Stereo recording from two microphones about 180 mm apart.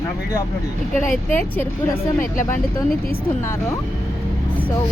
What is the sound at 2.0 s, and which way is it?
Speech, 45° left (ahead or behind).